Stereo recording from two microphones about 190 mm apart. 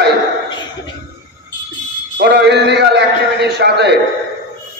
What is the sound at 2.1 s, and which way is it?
A man's voice, 65° right (ahead or behind).